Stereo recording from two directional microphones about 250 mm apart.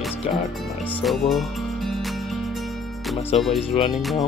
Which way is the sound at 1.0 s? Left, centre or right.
Centre.